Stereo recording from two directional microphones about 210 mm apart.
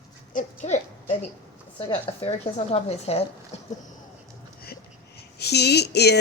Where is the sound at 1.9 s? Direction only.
30° left (ahead or behind).